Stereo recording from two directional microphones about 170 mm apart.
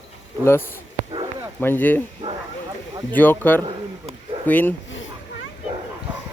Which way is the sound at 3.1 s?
10° left (ahead or behind).